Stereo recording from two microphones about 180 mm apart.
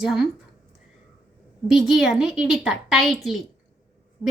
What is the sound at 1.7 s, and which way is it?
A woman's voice, centre (ahead or behind).